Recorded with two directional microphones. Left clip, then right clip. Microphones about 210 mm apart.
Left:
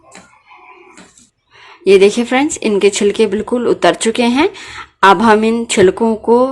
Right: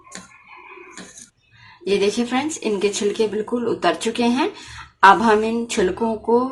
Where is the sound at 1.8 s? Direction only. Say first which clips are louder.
Left 11 dB; 50° left (ahead or behind).